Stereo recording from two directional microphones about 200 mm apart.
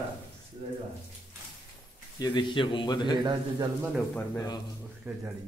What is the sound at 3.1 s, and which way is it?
Speech, 20° right (ahead or behind).